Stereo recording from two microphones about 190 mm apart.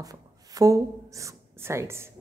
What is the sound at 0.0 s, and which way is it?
A woman's voice, 20° right (ahead or behind).